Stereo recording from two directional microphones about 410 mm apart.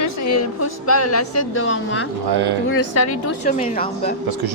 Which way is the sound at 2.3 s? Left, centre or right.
Right.